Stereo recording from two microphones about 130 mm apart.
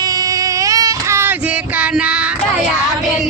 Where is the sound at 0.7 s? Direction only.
25° right (ahead or behind).